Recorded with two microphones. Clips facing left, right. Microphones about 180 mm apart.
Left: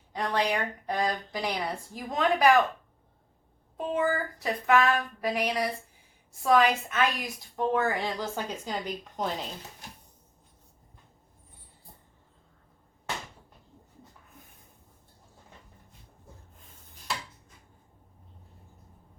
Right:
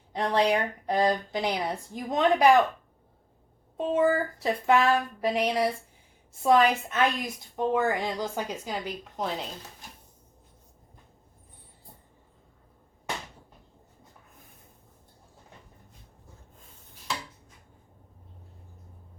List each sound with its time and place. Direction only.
0.1 s speech: 25° right (ahead or behind)
3.8 s speech: 25° right (ahead or behind); by 9.5 s centre (ahead or behind)